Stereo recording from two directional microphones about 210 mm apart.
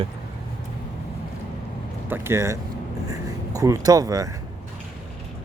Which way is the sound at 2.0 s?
10° right (ahead or behind).